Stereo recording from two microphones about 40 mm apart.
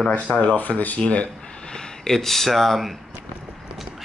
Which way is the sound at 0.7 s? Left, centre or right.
Centre.